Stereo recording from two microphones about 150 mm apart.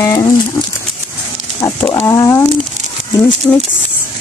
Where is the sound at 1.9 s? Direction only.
20° left (ahead or behind).